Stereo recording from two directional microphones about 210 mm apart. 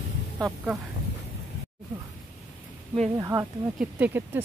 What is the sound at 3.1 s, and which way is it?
Speech, 15° right (ahead or behind).